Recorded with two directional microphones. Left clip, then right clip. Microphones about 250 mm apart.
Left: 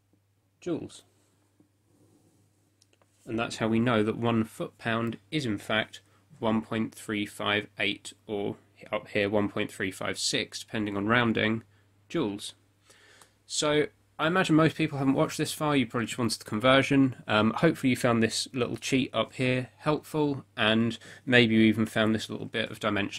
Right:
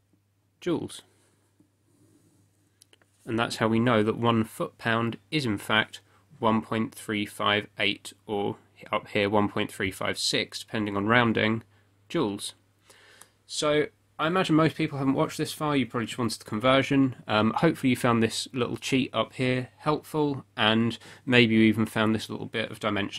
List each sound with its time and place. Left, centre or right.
0.6 s speech: right
2.8 s speech: right; by 11.6 s centre
12.1 s a sound: centre
13.5 s speech: centre